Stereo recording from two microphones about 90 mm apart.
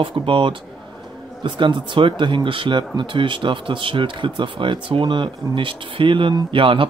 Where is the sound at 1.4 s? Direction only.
60° right (ahead or behind).